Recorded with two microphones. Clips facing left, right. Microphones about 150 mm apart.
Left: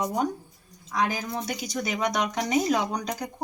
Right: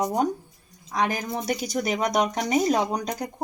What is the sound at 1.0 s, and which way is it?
Speech, 65° right (ahead or behind).